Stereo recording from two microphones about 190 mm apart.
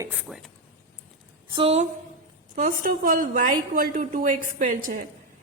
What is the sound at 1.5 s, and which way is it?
Speech, 30° right (ahead or behind).